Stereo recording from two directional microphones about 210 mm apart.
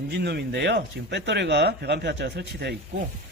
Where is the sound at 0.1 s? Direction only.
50° right (ahead or behind).